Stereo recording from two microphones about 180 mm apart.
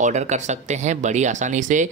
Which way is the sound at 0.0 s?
40° right (ahead or behind).